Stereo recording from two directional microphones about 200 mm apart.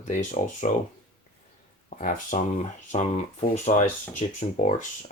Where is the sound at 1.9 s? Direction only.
40° left (ahead or behind).